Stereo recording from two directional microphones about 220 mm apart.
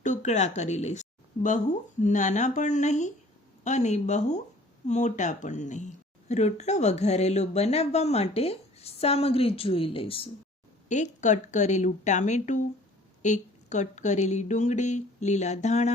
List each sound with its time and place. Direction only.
0.0 s a woman's voice: 35° left (ahead or behind)